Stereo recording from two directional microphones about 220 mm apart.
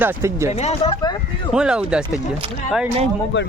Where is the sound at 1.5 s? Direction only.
5° right (ahead or behind).